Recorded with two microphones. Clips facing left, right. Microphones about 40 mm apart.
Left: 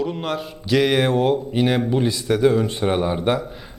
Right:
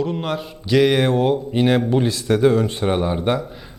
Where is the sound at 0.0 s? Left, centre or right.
Centre.